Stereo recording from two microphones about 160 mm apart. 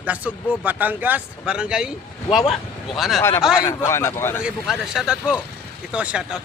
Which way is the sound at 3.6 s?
15° left (ahead or behind).